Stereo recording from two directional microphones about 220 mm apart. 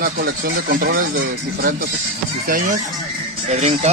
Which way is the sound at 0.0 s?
40° right (ahead or behind).